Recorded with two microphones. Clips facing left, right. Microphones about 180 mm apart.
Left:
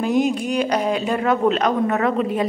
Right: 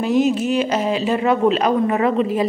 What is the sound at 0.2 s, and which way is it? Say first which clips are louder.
A woman's voice: right 2 dB; 5° right (ahead or behind).